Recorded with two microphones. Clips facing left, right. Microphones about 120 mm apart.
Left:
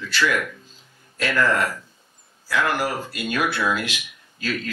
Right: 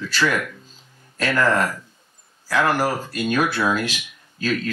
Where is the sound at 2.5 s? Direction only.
40° right (ahead or behind).